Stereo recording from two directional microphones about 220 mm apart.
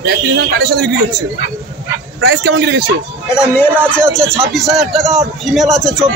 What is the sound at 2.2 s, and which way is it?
Speech, 55° right (ahead or behind).